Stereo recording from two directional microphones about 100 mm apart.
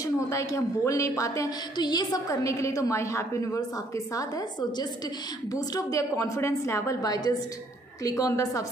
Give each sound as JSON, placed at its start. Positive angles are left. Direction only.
{"t": 0.0, "sound": "a woman's voice", "side_deg": 35}
{"t": 1.8, "sound": "a woman's voice", "side_deg": 45}